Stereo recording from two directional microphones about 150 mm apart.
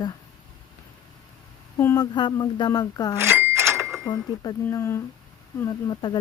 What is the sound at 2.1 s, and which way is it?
Speech, 30° left (ahead or behind).